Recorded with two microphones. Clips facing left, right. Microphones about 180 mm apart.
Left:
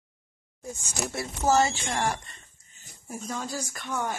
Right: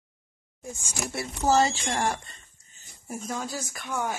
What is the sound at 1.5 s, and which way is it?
Speech, 35° right (ahead or behind).